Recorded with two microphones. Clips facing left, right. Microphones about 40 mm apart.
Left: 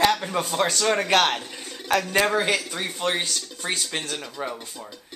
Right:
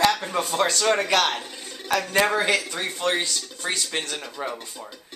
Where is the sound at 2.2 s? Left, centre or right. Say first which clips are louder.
Right 4 dB; centre.